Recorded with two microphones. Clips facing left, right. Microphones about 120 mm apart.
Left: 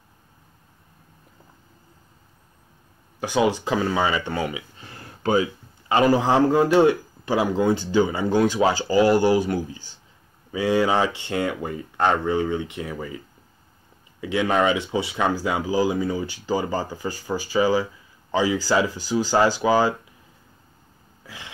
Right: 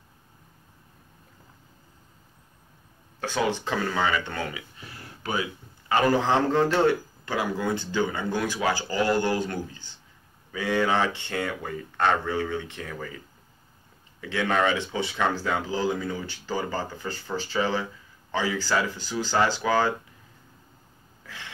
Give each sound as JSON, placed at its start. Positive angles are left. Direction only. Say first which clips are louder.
{"t": 3.2, "sound": "speech", "louder": "left 5 dB", "side_deg": 15}
{"t": 14.2, "sound": "speech", "louder": "left 4 dB", "side_deg": 15}
{"t": 21.2, "sound": "a sound", "louder": "left 2 dB", "side_deg": 15}